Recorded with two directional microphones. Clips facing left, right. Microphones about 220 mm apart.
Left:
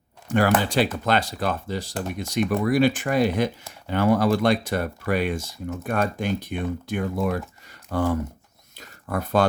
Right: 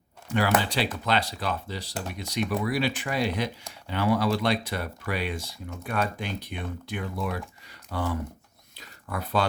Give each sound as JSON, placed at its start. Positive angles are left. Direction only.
{"t": 0.3, "sound": "speech", "side_deg": 50}